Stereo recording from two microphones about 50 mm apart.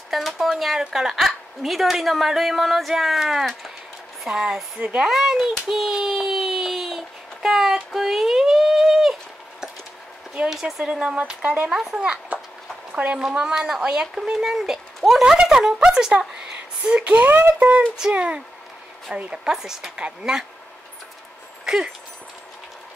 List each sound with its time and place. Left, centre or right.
0.1 s a woman's voice: centre
4.7 s speech: right
5.0 s a woman's voice: centre
5.7 s a sound: centre
10.5 s a woman's voice: centre
11.0 s speech: centre
11.7 s a woman's voice: centre; by 13.2 s right
13.2 s a woman's voice: centre
16.2 s a sound: centre
17.2 s speech: right
18.1 s a woman's voice: right
21.6 s dog: centre